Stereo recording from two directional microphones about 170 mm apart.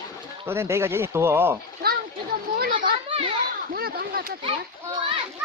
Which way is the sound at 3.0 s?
30° right (ahead or behind).